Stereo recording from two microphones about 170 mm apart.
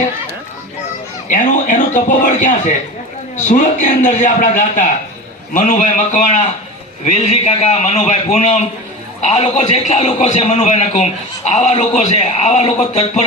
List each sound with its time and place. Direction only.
1.3 s a man's voice: 50° left (ahead or behind)